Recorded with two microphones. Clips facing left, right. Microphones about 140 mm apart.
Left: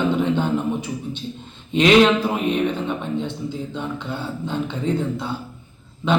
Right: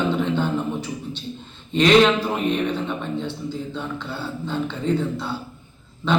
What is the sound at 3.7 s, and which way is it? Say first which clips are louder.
A man's voice: left 2 dB; 15° left (ahead or behind).